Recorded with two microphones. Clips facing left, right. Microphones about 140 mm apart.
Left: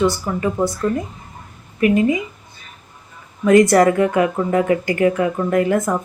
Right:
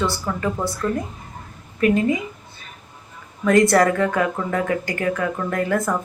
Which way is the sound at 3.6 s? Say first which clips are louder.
Left 3 dB; 20° left (ahead or behind).